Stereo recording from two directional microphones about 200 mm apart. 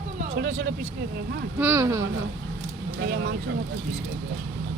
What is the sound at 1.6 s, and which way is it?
Speech, 10° right (ahead or behind).